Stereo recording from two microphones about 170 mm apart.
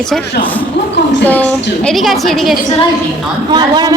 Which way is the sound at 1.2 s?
10° left (ahead or behind).